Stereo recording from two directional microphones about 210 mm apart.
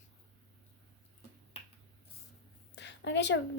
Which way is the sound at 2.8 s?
55° left (ahead or behind).